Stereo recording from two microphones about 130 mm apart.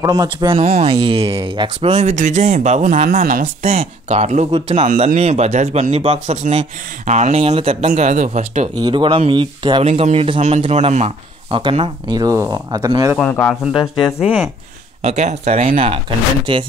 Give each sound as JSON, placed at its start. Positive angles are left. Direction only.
{"t": 0.0, "sound": "speech", "side_deg": -30}
{"t": 0.5, "sound": "speech", "side_deg": -55}
{"t": 2.1, "sound": "speech", "side_deg": -70}
{"t": 3.6, "sound": "speech", "side_deg": -55}
{"t": 5.0, "sound": "speech", "side_deg": -55}
{"t": 8.7, "sound": "speech", "side_deg": -35}
{"t": 9.8, "sound": "speech", "side_deg": -50}
{"t": 10.4, "sound": "speech", "side_deg": -55}
{"t": 11.8, "sound": "speech", "side_deg": -30}
{"t": 13.2, "sound": "speech", "side_deg": 10}
{"t": 13.7, "sound": "speech", "side_deg": 40}
{"t": 14.2, "sound": "speech", "side_deg": -10}
{"t": 15.0, "sound": "speech", "side_deg": -55}